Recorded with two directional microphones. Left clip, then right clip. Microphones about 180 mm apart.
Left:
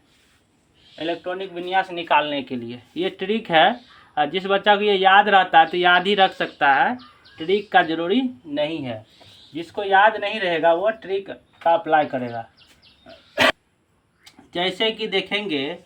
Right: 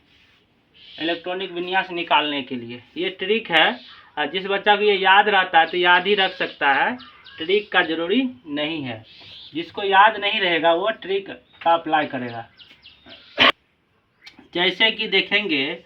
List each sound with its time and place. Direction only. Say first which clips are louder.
0.9 s speech: right 1 dB; 25° left (ahead or behind); by 6.9 s 70° left (ahead or behind)
7.3 s speech: left 1 dB; 90° left
9.6 s speech: right 1 dB; 35° left (ahead or behind)
14.5 s speech: right 3 dB; 30° left (ahead or behind)